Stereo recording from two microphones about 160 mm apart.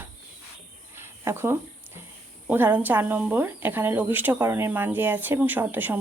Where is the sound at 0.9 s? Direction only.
15° right (ahead or behind).